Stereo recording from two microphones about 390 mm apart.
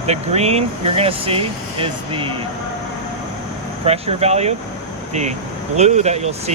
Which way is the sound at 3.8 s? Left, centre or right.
Centre.